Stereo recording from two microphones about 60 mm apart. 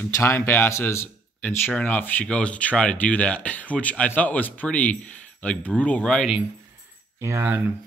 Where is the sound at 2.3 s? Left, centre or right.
Left.